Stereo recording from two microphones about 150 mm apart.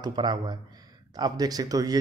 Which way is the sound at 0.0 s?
30° right (ahead or behind).